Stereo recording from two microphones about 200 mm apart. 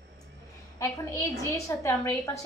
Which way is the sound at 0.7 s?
15° left (ahead or behind).